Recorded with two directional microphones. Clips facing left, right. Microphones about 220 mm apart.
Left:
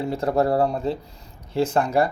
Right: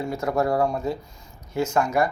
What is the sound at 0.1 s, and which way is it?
Speech, 30° left (ahead or behind).